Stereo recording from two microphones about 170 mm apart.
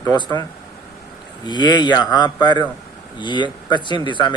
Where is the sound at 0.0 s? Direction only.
20° left (ahead or behind).